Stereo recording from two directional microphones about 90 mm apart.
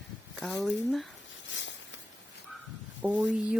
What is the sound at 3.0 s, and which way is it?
Speech, 15° right (ahead or behind).